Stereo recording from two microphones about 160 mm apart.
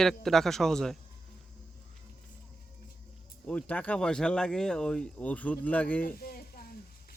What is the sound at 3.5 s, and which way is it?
Speech, 10° left (ahead or behind).